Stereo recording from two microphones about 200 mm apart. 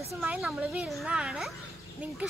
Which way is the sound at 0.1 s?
Centre (ahead or behind).